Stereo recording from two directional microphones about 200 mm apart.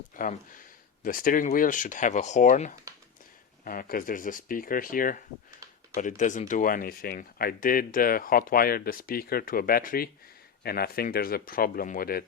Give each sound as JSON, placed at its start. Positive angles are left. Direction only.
{"t": 0.2, "sound": "speech", "side_deg": 40}